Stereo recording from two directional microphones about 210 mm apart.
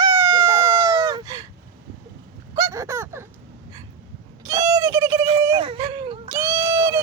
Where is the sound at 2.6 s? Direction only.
15° right (ahead or behind).